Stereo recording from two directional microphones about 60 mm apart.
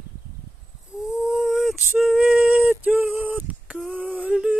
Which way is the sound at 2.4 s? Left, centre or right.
Right.